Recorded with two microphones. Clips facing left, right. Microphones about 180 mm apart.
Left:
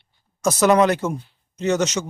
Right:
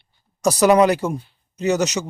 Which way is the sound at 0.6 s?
10° right (ahead or behind).